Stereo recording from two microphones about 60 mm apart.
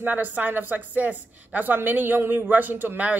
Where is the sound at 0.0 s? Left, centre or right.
Right.